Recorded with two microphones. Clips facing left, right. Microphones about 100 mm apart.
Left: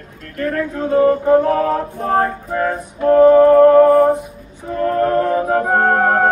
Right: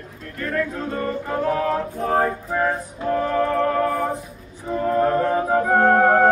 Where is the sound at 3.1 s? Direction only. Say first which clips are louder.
Left 13 dB; 20° left (ahead or behind).